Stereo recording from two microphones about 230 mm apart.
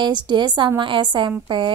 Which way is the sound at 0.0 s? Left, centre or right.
Centre.